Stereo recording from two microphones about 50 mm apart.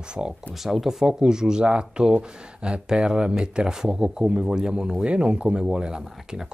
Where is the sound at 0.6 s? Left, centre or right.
Centre.